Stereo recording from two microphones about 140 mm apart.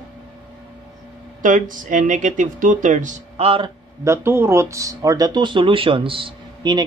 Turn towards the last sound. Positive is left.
turn(degrees=-35)  # may be behind; listen again after turning